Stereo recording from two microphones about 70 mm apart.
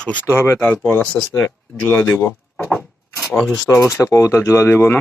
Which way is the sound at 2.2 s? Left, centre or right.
Left.